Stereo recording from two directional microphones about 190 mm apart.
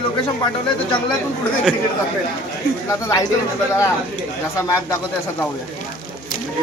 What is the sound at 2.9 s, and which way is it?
Speech, 20° left (ahead or behind).